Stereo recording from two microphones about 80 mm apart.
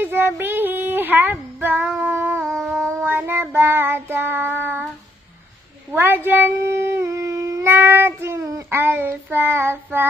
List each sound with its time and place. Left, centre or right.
0.0 s child singing: right
0.4 s a sound: right
1.6 s female singing: right
2.4 s a sound: centre
2.7 s child singing: right
5.9 s humming: right
8.6 s child singing: right